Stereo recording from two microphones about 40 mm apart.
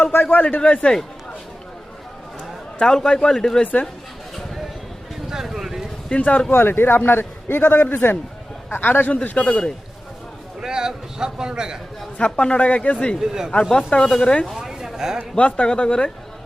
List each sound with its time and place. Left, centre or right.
0.3 s a man's voice: left
0.6 s speech: left
2.7 s a man's voice: centre
5.3 s a sound: centre
6.1 s speech: left
6.5 s a man's voice: left
7.6 s a man's voice: left
9.3 s speech: left
10.6 s a man's voice: centre
12.1 s speech: left
13.1 s a man's voice: centre
13.7 s speech: centre
14.5 s a sound: centre
15.4 s speech: left